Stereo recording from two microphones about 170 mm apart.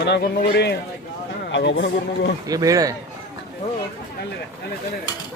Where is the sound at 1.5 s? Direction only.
90° left.